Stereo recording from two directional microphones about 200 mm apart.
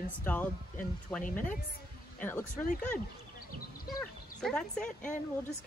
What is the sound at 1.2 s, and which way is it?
Speech, 40° left (ahead or behind).